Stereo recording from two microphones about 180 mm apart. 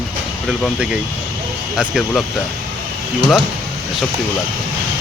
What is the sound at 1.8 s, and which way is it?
Speech, centre (ahead or behind).